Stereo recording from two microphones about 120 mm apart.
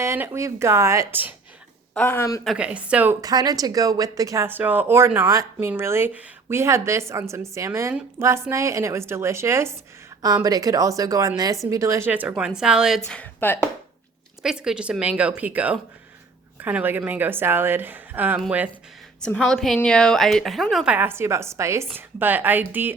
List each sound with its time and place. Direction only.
0.0 s speech: 20° right (ahead or behind)
1.9 s speech: 15° left (ahead or behind)
2.6 s speech: 10° right (ahead or behind)
3.2 s speech: 30° right (ahead or behind)
4.4 s speech: 15° right (ahead or behind)
13.1 s speech: 15° left (ahead or behind)
14.4 s a woman's voice: 5° right (ahead or behind)
19.2 s a woman's voice: 10° left (ahead or behind)
20.9 s speech: 15° right (ahead or behind)